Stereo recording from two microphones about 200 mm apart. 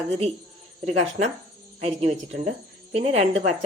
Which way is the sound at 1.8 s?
35° right (ahead or behind).